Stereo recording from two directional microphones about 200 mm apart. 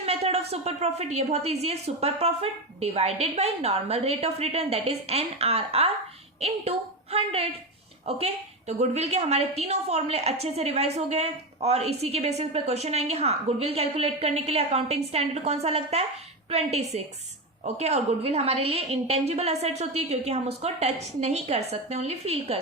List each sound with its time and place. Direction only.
0.0 s a woman's voice: 30° right (ahead or behind)